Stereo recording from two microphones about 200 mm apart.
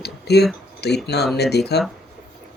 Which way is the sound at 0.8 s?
55° left (ahead or behind).